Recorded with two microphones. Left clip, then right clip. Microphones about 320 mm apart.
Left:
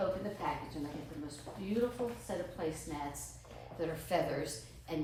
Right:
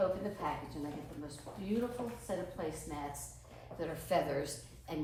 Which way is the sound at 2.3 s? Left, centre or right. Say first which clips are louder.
Left 1 dB; centre.